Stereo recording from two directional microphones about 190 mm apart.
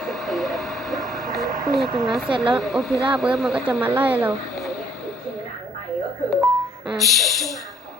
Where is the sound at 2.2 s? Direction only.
25° right (ahead or behind).